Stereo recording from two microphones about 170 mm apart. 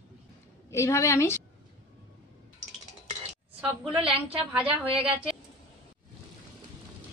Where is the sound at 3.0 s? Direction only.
35° right (ahead or behind).